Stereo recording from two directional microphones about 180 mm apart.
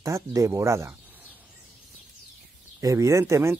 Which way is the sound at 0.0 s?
20° right (ahead or behind).